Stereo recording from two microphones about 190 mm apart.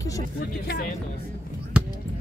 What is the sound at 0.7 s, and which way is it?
Speech, 50° left (ahead or behind).